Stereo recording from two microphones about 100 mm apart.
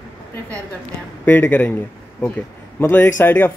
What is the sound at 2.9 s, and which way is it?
Speech, 20° left (ahead or behind).